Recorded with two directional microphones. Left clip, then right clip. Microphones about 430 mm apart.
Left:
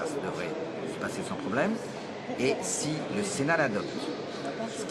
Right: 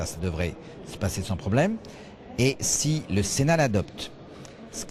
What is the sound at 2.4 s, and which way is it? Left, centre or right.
Speech, right.